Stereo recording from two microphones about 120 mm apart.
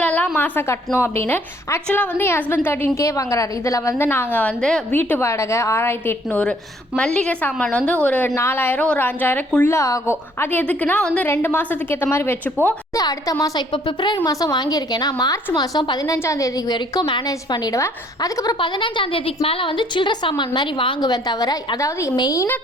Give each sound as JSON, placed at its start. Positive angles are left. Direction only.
{"t": 0.0, "sound": "a sound", "side_deg": 10}
{"t": 0.9, "sound": "a woman's voice", "side_deg": 20}
{"t": 9.6, "sound": "a woman's voice", "side_deg": 25}
{"t": 10.4, "sound": "a woman's voice", "side_deg": 15}
{"t": 13.0, "sound": "a woman's voice", "side_deg": 30}
{"t": 16.1, "sound": "a woman's voice", "side_deg": 25}